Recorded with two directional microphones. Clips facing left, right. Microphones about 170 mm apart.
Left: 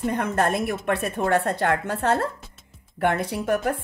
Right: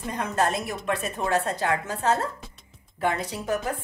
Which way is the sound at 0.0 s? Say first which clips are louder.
Left 3 dB; 55° left (ahead or behind).